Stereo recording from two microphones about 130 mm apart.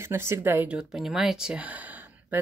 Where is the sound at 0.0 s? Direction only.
20° right (ahead or behind).